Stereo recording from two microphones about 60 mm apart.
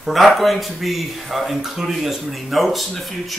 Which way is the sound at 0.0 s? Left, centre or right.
Centre.